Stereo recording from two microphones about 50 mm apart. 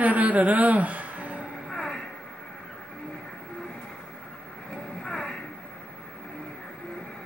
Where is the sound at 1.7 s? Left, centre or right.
Centre.